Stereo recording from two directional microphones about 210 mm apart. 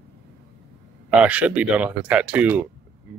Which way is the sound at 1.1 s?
5° right (ahead or behind).